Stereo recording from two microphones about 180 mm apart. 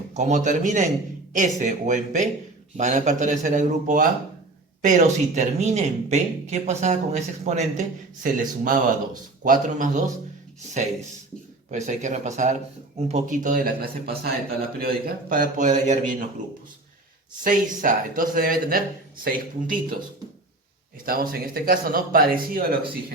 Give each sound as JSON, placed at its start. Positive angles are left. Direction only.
{"t": 0.1, "sound": "speech", "side_deg": -40}
{"t": 11.7, "sound": "speech", "side_deg": -40}
{"t": 17.4, "sound": "speech", "side_deg": -45}
{"t": 21.0, "sound": "speech", "side_deg": -55}